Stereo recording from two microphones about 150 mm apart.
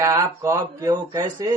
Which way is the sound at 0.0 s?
20° right (ahead or behind).